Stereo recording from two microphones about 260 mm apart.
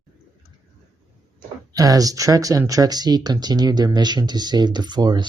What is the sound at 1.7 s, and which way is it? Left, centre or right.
Speech, centre.